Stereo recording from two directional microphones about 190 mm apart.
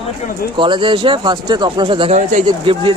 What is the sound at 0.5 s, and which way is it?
Speech, 25° right (ahead or behind).